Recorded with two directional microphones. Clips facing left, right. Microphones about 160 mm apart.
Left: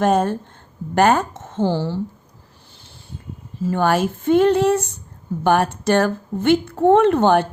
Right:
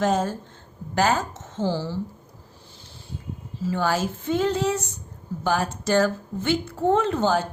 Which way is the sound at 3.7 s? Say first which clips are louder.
Left 6 dB; 60° left (ahead or behind).